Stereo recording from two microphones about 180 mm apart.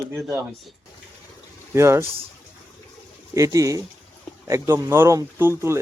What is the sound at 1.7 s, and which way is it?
Speech, 15° right (ahead or behind).